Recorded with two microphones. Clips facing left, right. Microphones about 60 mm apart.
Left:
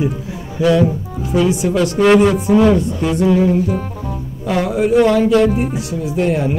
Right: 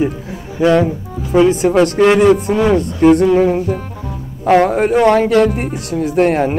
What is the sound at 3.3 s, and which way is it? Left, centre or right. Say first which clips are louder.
Music: right 2 dB; right.